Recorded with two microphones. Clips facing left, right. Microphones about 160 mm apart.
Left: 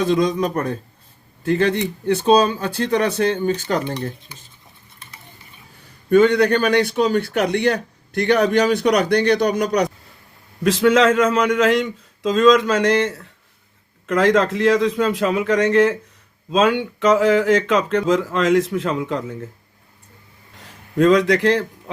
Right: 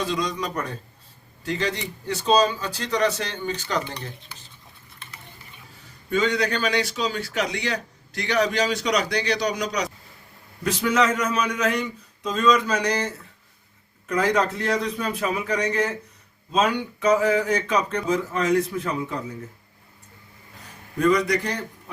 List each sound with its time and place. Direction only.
0.0 s a man's voice: 50° left (ahead or behind)
6.1 s a man's voice: 55° left (ahead or behind)
10.6 s speech: 90° left
20.9 s speech: 90° left